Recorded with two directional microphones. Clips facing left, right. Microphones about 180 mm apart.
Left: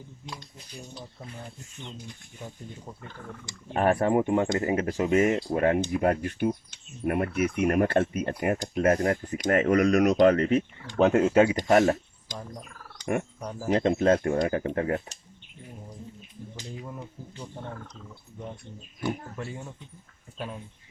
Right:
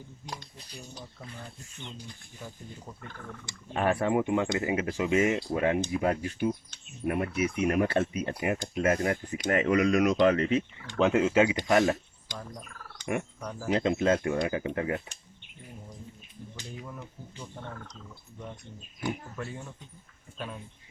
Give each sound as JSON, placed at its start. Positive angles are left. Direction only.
{"t": 3.4, "sound": "speech", "side_deg": 45}
{"t": 13.4, "sound": "speech", "side_deg": 15}
{"t": 13.7, "sound": "speech", "side_deg": 45}